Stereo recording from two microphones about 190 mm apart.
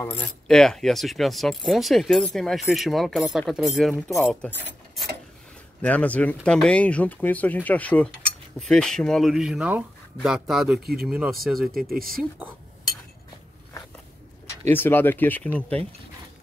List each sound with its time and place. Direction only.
0.0 s speech: 10° left (ahead or behind)
5.8 s speech: 5° left (ahead or behind)
11.9 s speech: 50° right (ahead or behind)
12.2 s speech: 10° right (ahead or behind)
14.7 s speech: 10° left (ahead or behind)